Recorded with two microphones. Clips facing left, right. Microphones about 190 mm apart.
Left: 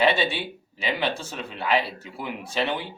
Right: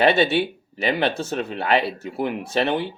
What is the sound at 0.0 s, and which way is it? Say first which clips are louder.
Speech: right 5 dB; 60° right (ahead or behind).